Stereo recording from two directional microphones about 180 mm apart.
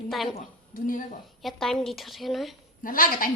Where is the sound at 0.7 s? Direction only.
50° left (ahead or behind).